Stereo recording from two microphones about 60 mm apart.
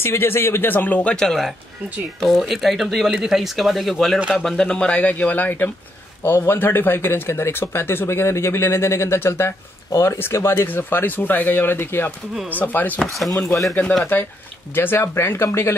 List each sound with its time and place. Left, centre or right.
0.0 s speech: left
1.1 s speech: centre
4.6 s speech: centre; by 12.1 s left
12.7 s speech: left